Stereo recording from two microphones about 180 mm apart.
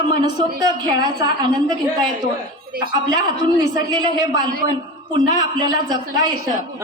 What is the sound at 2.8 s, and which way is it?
A man's voice, 25° right (ahead or behind).